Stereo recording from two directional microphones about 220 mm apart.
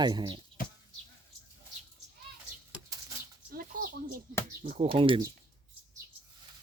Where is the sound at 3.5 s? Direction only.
40° right (ahead or behind).